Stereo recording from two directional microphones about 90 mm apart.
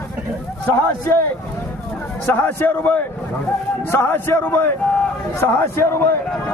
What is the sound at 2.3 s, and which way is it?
A man's voice, 20° left (ahead or behind).